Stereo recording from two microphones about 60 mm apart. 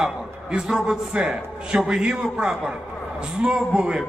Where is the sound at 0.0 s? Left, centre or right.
Centre.